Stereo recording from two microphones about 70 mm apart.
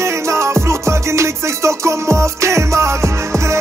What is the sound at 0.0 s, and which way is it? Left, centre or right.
Music, right.